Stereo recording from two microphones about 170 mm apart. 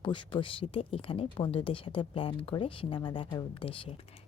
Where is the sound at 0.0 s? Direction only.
30° left (ahead or behind).